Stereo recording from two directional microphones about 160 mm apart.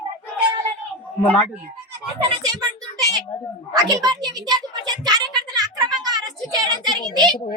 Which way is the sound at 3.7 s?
25° right (ahead or behind).